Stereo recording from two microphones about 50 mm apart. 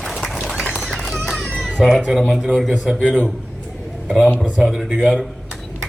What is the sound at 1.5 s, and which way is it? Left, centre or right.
Cat, centre.